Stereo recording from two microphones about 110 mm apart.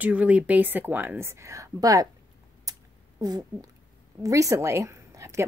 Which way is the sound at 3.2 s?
35° right (ahead or behind).